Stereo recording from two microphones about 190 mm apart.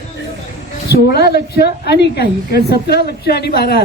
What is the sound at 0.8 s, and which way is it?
A woman's voice, 55° left (ahead or behind).